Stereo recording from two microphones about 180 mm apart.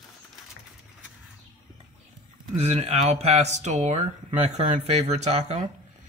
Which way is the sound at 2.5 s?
35° right (ahead or behind).